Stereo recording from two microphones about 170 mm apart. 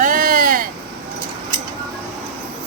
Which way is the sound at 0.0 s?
55° right (ahead or behind).